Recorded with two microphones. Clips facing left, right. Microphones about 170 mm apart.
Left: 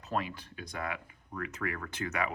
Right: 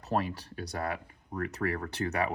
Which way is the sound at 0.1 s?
35° right (ahead or behind).